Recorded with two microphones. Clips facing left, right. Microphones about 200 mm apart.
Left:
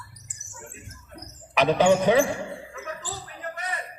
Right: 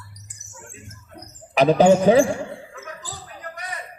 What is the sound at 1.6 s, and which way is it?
Speech, 35° right (ahead or behind).